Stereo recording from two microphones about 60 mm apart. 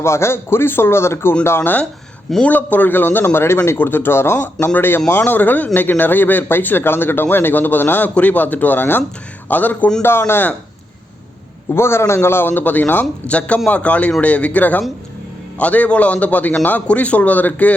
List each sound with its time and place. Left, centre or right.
0.0 s a man's voice: left
10.0 s a man's voice: left
11.7 s a man's voice: left